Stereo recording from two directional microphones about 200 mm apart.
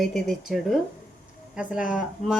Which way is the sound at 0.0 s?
Centre (ahead or behind).